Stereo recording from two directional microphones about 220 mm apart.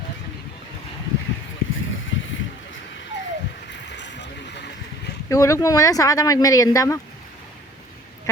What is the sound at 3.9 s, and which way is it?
Boat, 55° left (ahead or behind).